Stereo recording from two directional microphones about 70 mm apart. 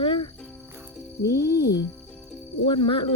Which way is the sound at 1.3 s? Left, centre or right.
Left.